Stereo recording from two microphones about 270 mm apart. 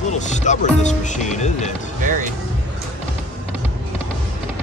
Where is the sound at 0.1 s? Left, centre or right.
Left.